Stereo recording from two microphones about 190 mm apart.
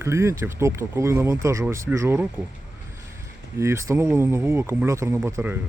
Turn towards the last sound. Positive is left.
turn(degrees=-10)  # may be behind; listen again after turning